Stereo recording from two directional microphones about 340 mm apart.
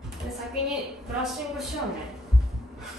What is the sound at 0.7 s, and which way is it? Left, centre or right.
Speech, centre.